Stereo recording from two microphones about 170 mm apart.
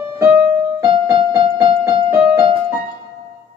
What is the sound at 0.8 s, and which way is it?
Keyboard, 30° right (ahead or behind).